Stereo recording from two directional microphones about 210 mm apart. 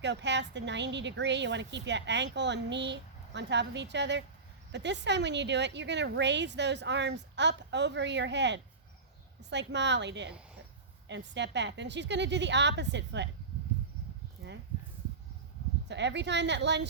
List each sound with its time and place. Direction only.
0.0 s a woman's voice: 55° right (ahead or behind)
15.9 s a woman's voice: 55° right (ahead or behind)